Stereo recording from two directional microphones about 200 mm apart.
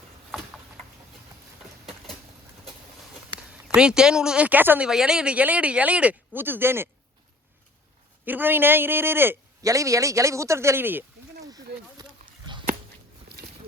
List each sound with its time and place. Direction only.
3.5 s speech: 5° right (ahead or behind)
8.2 s speech: 10° right (ahead or behind)
12.5 s a sound: 25° right (ahead or behind)